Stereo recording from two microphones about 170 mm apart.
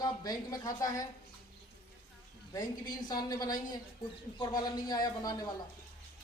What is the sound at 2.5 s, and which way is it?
A woman's voice, 25° left (ahead or behind).